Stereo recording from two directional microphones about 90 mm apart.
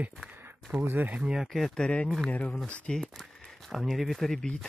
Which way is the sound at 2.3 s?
15° left (ahead or behind).